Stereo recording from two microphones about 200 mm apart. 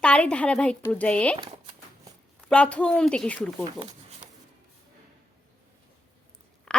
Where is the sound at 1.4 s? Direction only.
25° right (ahead or behind).